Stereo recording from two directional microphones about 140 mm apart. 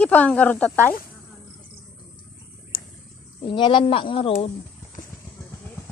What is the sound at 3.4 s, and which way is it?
Speech, 35° left (ahead or behind).